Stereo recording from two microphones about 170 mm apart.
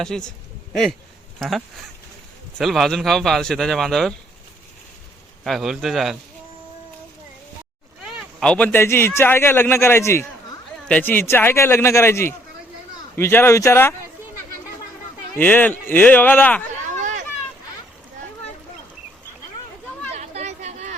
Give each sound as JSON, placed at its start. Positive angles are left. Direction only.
{"t": 0.0, "sound": "a man's voice", "side_deg": 5}
{"t": 5.4, "sound": "a man's voice", "side_deg": 0}
{"t": 8.0, "sound": "speech", "side_deg": 5}
{"t": 15.4, "sound": "speech", "side_deg": 10}
{"t": 16.8, "sound": "a sound", "side_deg": -45}
{"t": 20.1, "sound": "a sound", "side_deg": -40}